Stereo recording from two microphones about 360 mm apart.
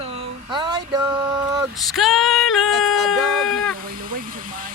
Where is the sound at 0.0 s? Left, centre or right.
Centre.